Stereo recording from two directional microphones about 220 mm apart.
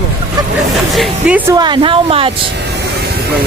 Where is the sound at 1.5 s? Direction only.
20° right (ahead or behind).